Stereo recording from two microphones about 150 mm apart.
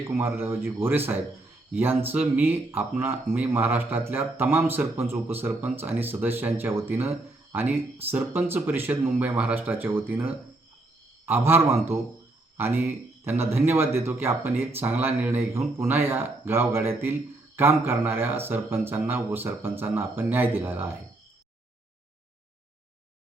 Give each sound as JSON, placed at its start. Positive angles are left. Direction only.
{"t": 0.1, "sound": "speech", "side_deg": -15}